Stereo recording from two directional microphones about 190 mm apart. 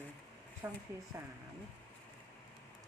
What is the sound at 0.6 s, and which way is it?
Speech, 15° right (ahead or behind).